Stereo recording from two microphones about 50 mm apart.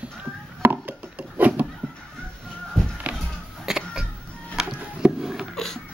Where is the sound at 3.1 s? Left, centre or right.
Right.